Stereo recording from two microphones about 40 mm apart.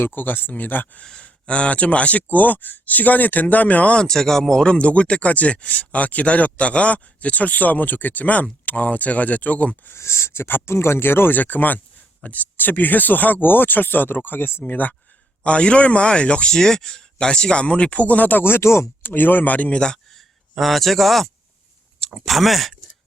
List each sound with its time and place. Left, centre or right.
0.0 s speech: left
1.2 s speech: left
2.3 s speech: left
3.9 s speech: centre
4.7 s speech: left
9.9 s speech: left
11.3 s speech: left
12.5 s speech: left
14.7 s speech: left
15.4 s speech: left
16.6 s speech: centre; by 18.4 s left
18.4 s speech: left
20.1 s a sound: centre
22.2 s speech: centre